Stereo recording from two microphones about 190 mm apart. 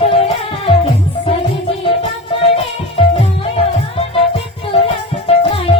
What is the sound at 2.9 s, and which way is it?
Music, 30° left (ahead or behind).